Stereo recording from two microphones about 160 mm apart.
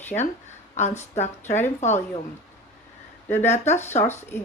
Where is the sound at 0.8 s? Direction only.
45° left (ahead or behind).